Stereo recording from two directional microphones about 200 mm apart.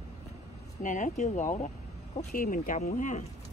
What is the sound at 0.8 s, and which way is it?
Speech, 40° left (ahead or behind).